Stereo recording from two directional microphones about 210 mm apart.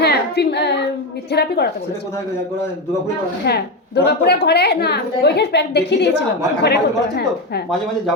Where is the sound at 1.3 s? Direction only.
50° left (ahead or behind).